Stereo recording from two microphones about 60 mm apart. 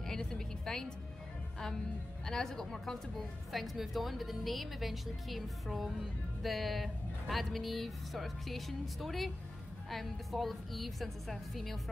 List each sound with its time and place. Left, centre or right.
0.0 s music: centre
2.2 s a woman's voice: centre